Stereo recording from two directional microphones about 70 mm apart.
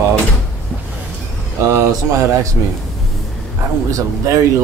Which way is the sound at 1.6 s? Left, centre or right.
Right.